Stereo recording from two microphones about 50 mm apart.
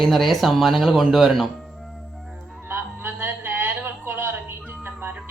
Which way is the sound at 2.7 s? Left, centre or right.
Right.